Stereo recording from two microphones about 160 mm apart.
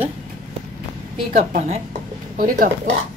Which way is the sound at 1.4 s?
45° right (ahead or behind).